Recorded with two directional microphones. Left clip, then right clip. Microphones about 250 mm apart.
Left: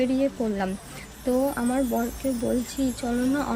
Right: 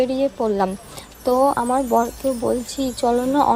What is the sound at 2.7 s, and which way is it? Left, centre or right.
Speech, centre.